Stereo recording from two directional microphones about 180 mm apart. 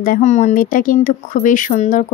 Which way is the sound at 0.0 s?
45° left (ahead or behind).